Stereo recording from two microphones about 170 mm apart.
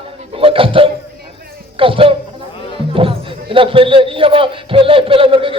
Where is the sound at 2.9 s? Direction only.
30° right (ahead or behind).